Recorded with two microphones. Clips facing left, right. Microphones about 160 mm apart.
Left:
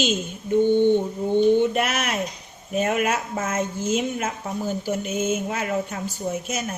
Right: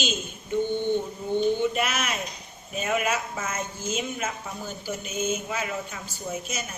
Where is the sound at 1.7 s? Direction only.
65° left (ahead or behind).